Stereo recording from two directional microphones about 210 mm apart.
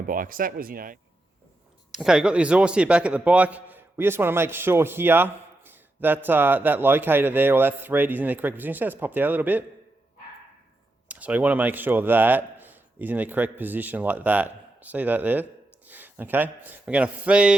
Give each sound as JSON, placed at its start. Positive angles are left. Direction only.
{"t": 0.0, "sound": "speech", "side_deg": -40}
{"t": 1.9, "sound": "a man's voice", "side_deg": 0}
{"t": 11.1, "sound": "a man's voice", "side_deg": -5}